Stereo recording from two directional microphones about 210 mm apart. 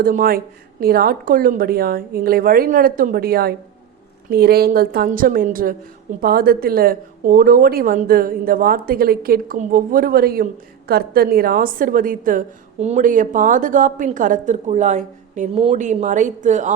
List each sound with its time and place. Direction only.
0.0 s speech: 40° right (ahead or behind)